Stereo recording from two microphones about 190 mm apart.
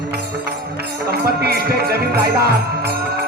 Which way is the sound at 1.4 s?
55° right (ahead or behind).